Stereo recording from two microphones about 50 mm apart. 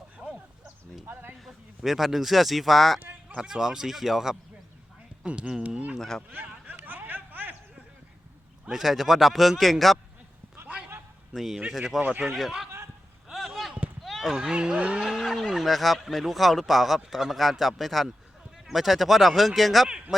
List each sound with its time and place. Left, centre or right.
1.0 s a sound: right
1.5 s speech: centre
3.0 s a sound: right
3.3 s speech: centre
5.2 s speech: right
5.6 s speech: right
6.0 s speech: centre
6.7 s a sound: right
8.6 s speech: centre
11.3 s speech: centre
13.3 s basketball bounce: centre
14.0 s a sound: centre
14.5 s speech: centre
15.0 s speech: centre